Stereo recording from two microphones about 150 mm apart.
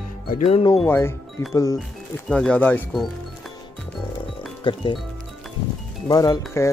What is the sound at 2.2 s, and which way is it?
Speech, 5° left (ahead or behind).